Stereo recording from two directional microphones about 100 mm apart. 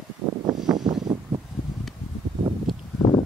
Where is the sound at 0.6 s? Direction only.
45° right (ahead or behind).